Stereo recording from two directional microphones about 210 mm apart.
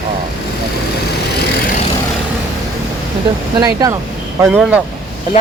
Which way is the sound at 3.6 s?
15° right (ahead or behind).